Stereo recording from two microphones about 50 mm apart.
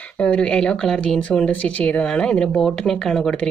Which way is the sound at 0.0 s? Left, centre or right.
Left.